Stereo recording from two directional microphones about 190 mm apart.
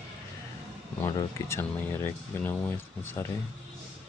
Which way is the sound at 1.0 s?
15° left (ahead or behind).